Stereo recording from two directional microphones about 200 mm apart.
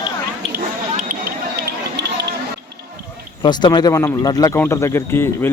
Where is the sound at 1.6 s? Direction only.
55° right (ahead or behind).